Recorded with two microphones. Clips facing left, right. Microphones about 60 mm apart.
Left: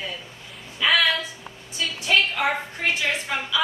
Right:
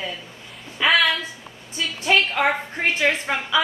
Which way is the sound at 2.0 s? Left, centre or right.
Right.